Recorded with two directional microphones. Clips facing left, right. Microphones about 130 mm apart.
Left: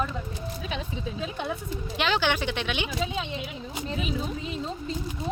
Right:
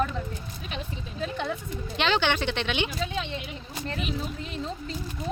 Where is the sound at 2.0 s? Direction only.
5° left (ahead or behind).